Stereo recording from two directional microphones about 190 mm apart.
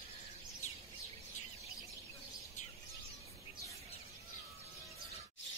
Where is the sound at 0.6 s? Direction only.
35° left (ahead or behind).